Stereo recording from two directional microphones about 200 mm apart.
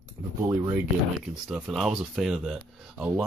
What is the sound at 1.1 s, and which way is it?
Speech, 5° right (ahead or behind).